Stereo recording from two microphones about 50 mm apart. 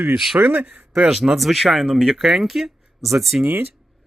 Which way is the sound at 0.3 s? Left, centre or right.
Right.